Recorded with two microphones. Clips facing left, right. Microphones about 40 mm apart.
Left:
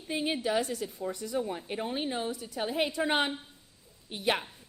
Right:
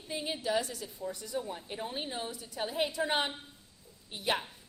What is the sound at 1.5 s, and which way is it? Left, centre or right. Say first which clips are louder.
Speech: left 5 dB; left.